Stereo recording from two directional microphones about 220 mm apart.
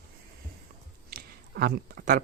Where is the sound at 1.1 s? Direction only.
45° right (ahead or behind).